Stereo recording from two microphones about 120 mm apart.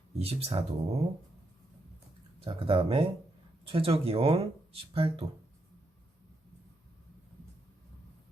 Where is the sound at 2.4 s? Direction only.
50° right (ahead or behind).